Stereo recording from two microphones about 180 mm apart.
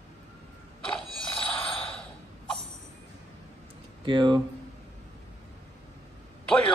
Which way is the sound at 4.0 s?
25° right (ahead or behind).